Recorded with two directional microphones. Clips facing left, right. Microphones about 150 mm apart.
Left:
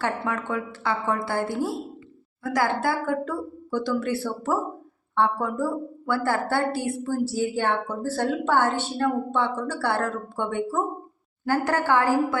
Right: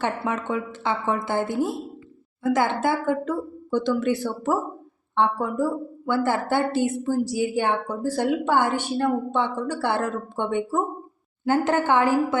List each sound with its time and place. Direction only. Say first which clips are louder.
0.3 s a woman's voice: right 2 dB; 20° right (ahead or behind)